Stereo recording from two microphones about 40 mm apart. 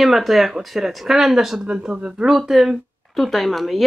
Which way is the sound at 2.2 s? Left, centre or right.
Centre.